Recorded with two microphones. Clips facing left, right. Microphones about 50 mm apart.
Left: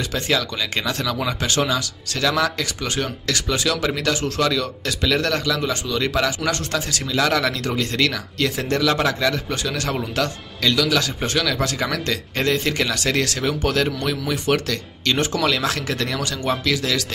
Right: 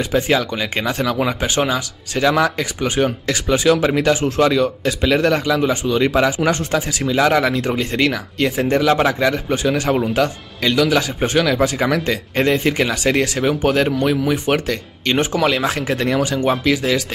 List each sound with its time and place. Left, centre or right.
0.0 s speech: right